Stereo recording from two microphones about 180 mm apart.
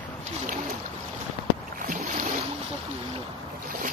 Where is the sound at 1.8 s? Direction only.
45° right (ahead or behind).